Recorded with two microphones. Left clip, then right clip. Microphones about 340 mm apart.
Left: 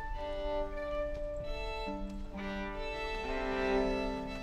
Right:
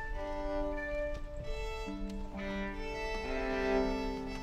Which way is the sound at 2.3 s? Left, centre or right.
Left.